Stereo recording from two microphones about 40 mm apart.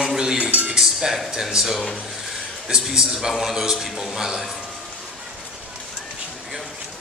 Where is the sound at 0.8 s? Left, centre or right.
Centre.